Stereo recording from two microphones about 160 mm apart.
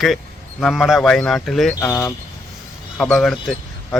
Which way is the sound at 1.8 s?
20° left (ahead or behind).